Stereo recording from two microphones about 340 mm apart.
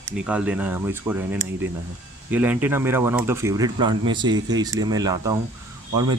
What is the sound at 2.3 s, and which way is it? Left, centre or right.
Speech, centre.